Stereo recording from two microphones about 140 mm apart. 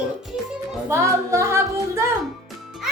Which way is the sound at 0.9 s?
20° right (ahead or behind).